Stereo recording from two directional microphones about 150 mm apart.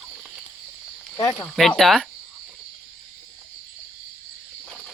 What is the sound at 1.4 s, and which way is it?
Speech, 5° left (ahead or behind).